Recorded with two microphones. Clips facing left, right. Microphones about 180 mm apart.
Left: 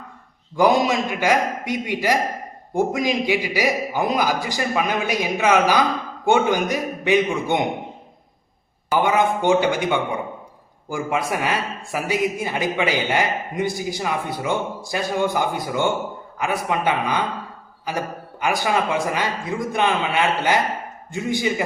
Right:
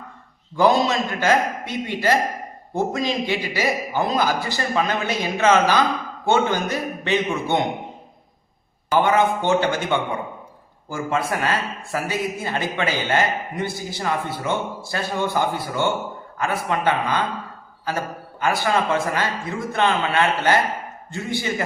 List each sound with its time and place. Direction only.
0.5 s a man's voice: 15° left (ahead or behind)
9.0 s a man's voice: 15° left (ahead or behind)
10.8 s a man's voice: 15° left (ahead or behind)